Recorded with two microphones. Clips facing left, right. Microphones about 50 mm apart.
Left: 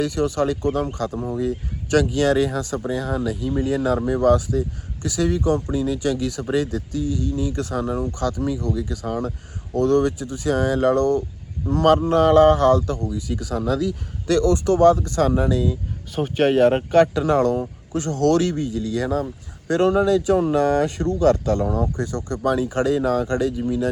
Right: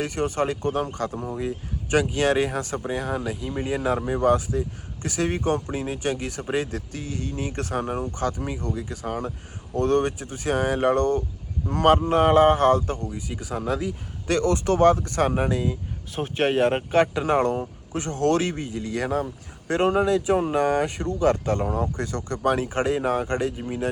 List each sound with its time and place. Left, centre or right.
0.0 s speech: right
16.1 s speech: centre
17.2 s speech: right
19.2 s speech: right